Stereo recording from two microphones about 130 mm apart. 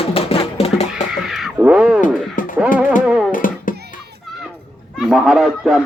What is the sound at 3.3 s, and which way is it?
Music, 90° left.